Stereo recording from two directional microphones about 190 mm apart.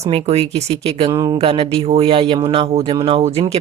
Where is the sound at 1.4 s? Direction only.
30° right (ahead or behind).